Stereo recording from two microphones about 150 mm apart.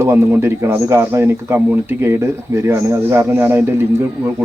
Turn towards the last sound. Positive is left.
turn(degrees=-15)  # may be behind; listen again after turning